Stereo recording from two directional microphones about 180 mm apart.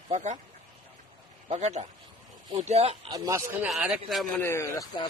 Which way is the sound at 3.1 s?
15° right (ahead or behind).